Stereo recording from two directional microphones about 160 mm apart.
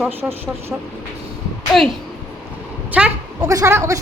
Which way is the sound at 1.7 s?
Centre (ahead or behind).